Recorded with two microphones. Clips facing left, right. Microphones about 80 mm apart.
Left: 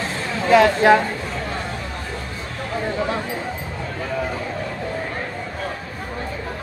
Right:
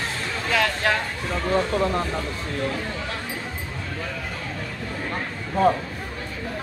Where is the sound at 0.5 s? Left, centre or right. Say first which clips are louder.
Left 10 dB; left.